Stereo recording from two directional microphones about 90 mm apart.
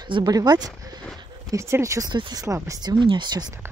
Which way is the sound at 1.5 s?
35° right (ahead or behind).